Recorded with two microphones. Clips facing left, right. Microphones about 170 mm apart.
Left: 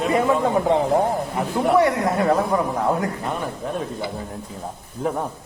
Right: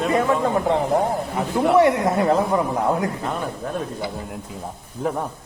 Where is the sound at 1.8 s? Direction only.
20° right (ahead or behind).